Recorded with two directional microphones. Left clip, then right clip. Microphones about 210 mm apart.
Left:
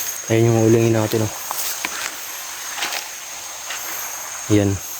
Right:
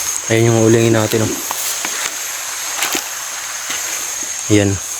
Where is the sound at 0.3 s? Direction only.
5° left (ahead or behind).